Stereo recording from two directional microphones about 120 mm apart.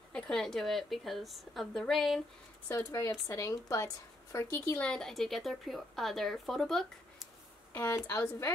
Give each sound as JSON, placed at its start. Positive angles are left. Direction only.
{"t": 0.1, "sound": "a woman's voice", "side_deg": 5}
{"t": 2.7, "sound": "a woman's voice", "side_deg": 25}
{"t": 4.6, "sound": "a woman's voice", "side_deg": 10}
{"t": 7.7, "sound": "a woman's voice", "side_deg": 20}